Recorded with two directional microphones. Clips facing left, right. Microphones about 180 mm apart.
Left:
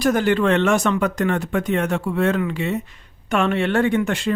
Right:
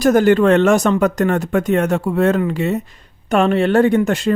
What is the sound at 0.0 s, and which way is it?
Speech, 45° right (ahead or behind).